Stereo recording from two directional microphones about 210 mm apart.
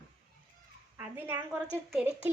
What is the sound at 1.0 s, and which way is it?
A woman's voice, 10° right (ahead or behind).